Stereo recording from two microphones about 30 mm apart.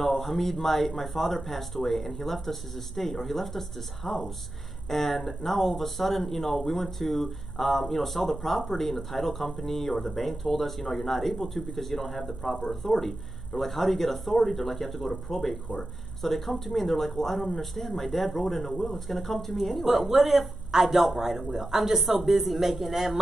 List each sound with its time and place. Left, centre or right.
0.0 s a man's voice: centre